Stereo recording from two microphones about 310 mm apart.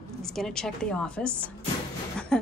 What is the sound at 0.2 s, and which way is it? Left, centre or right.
A woman's voice, centre.